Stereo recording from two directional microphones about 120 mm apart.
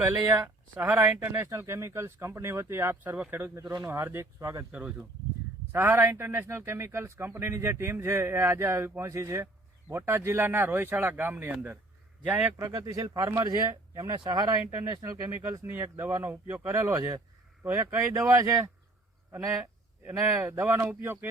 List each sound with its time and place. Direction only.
0.0 s a man's voice: 15° right (ahead or behind)
3.6 s speech: 35° right (ahead or behind)
3.8 s a man's voice: 20° right (ahead or behind)
4.7 s a man's voice: 15° right (ahead or behind)
12.6 s a man's voice: 30° right (ahead or behind)
16.9 s a man's voice: 30° right (ahead or behind)
20.1 s a man's voice: 20° right (ahead or behind)